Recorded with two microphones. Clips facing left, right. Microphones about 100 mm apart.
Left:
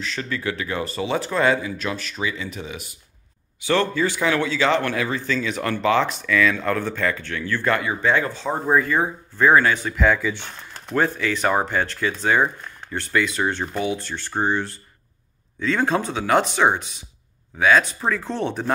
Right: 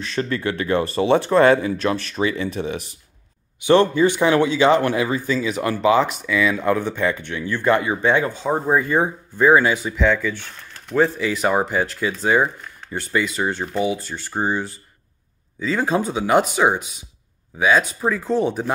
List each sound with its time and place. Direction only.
0.2 s speech: 40° right (ahead or behind)
0.8 s speech: 55° right (ahead or behind)
1.1 s speech: 35° right (ahead or behind); by 9.8 s 15° right (ahead or behind)
9.8 s speech: centre (ahead or behind)
11.0 s speech: 5° right (ahead or behind)